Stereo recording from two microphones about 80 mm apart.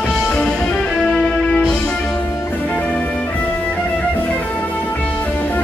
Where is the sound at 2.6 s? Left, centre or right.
Centre.